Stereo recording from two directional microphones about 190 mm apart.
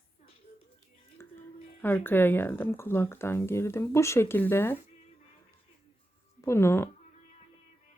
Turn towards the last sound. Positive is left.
turn(degrees=15)  # may be behind; listen again after turning